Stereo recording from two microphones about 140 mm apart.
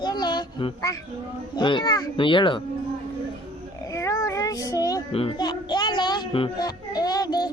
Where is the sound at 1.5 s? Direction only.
35° left (ahead or behind).